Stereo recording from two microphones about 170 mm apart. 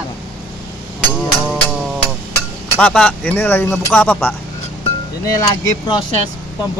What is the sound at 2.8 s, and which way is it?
Speech, 5° left (ahead or behind).